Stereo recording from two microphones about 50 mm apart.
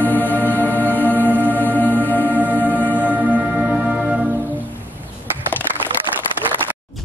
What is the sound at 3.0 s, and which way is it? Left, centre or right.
Music, right.